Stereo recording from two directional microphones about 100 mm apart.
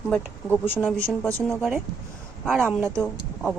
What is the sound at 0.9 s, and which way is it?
Speech, 5° left (ahead or behind).